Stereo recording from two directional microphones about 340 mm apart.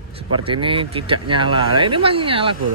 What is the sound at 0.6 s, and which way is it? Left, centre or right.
Speech, centre.